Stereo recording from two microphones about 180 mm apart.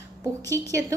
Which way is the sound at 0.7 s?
20° right (ahead or behind).